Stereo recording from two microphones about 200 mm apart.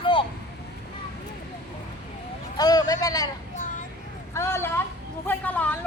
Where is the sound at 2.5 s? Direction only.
20° left (ahead or behind).